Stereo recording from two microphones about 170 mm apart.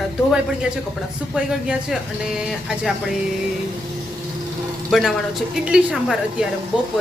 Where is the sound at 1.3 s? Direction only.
5° right (ahead or behind).